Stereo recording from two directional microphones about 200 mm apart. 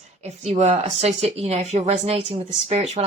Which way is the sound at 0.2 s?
35° right (ahead or behind).